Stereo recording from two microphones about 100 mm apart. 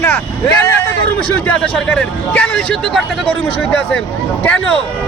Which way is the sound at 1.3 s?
15° left (ahead or behind).